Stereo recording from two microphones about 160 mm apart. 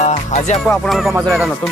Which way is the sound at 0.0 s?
45° left (ahead or behind).